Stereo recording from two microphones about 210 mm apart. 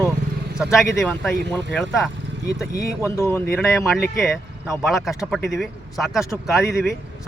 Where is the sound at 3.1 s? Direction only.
15° left (ahead or behind).